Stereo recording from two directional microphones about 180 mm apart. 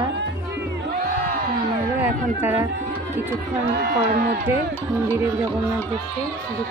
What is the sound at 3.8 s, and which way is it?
Speech, 60° right (ahead or behind).